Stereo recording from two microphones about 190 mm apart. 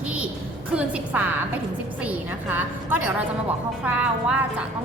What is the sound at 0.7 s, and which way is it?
A woman's voice, 5° right (ahead or behind).